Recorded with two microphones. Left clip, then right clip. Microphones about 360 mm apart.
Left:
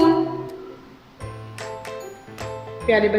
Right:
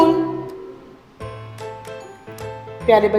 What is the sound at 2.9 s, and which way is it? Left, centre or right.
Speech, centre.